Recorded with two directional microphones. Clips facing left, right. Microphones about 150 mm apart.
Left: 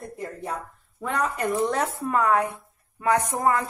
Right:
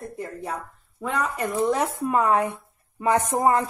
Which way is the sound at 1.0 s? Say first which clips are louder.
Even; centre (ahead or behind).